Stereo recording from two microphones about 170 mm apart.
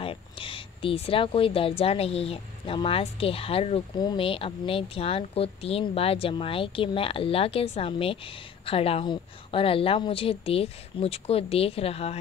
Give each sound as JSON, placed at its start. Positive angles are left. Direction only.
{"t": 0.0, "sound": "a woman's voice", "side_deg": 30}